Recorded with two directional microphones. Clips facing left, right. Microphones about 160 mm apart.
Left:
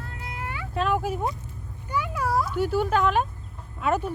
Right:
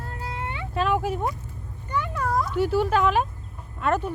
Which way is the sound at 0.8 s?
Centre (ahead or behind).